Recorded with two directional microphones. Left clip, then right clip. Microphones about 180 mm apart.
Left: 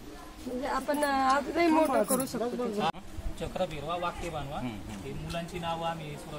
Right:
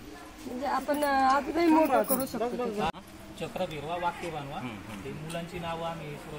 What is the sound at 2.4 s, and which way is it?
Speech, 60° left (ahead or behind).